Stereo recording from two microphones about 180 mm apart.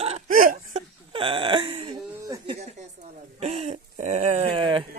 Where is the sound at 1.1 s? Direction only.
30° right (ahead or behind).